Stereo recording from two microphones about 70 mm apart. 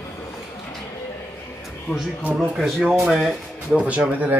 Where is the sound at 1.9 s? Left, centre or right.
Left.